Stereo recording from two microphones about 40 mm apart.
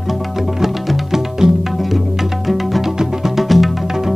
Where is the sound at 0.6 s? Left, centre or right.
Centre.